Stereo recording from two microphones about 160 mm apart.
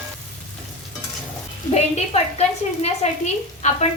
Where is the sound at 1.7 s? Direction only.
40° left (ahead or behind).